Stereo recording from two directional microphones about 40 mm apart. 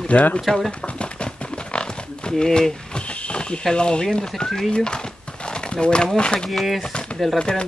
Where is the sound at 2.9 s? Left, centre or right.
Left.